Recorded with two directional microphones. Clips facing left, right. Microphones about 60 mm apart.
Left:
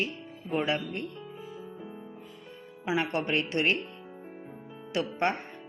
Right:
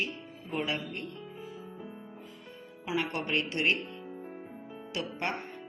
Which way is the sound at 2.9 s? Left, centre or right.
Left.